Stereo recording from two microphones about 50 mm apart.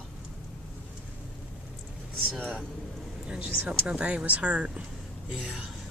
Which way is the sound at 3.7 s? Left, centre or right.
Right.